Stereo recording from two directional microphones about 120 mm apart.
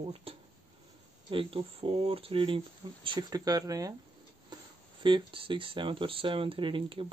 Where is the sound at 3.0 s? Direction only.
35° right (ahead or behind).